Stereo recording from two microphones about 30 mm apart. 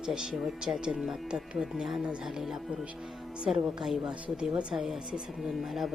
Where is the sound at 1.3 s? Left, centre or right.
Right.